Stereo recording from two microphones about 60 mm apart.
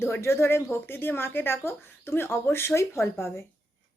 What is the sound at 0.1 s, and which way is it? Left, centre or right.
A woman's voice, left.